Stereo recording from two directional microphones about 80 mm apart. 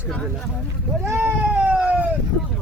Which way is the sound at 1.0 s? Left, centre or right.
Right.